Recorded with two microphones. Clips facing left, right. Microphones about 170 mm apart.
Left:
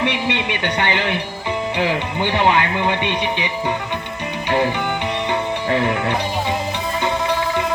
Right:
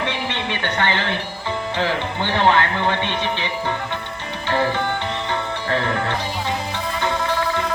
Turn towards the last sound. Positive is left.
turn(degrees=15)  # may be behind; listen again after turning